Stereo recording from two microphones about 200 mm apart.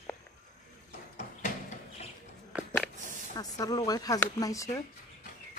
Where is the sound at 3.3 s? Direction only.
20° left (ahead or behind).